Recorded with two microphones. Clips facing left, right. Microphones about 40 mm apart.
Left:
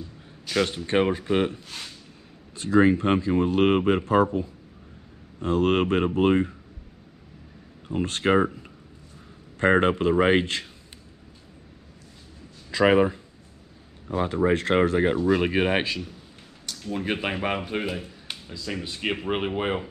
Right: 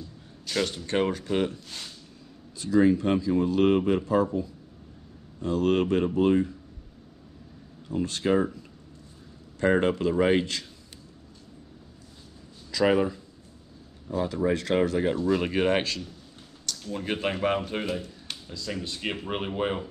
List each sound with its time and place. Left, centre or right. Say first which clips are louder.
0.5 s speech: left 4 dB; left
2.5 s speech: left 2 dB; left
7.9 s speech: left 3 dB; left
9.6 s speech: left 3 dB; left
12.7 s speech: left 4 dB; left